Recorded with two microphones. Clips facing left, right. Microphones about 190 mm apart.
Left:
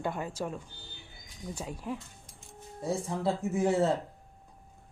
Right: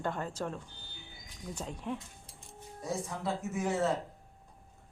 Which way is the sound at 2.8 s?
30° left (ahead or behind).